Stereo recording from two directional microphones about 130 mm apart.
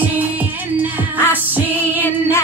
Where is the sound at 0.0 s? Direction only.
15° right (ahead or behind).